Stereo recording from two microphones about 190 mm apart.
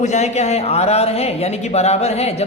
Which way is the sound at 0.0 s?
35° left (ahead or behind).